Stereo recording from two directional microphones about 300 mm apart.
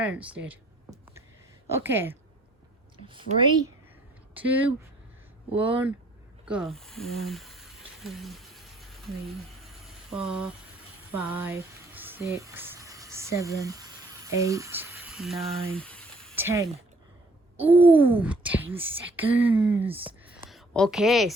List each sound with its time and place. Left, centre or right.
0.0 s a sound: centre
1.7 s a woman's voice: centre
4.4 s speech: centre
6.4 s snake: centre
6.7 s speech: centre
8.0 s a sound: centre
14.3 s speech: centre
15.7 s a sound: centre
16.3 s speech: centre
17.7 s speech: centre